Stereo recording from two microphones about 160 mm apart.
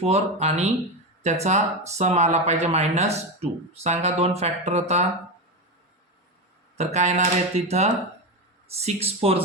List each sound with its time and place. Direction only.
0.0 s speech: 40° right (ahead or behind)
6.7 s speech: 45° right (ahead or behind)